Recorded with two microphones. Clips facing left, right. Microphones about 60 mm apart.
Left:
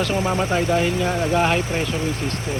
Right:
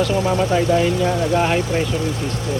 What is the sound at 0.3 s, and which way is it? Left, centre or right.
Speech, left.